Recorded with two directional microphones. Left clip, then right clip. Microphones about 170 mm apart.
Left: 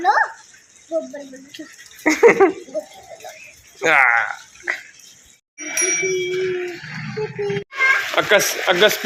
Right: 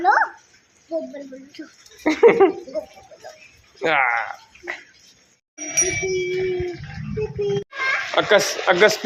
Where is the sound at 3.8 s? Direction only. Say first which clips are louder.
Left 5 dB; 10° right (ahead or behind).